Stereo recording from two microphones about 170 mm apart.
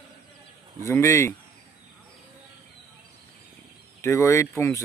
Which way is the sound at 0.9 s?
15° left (ahead or behind).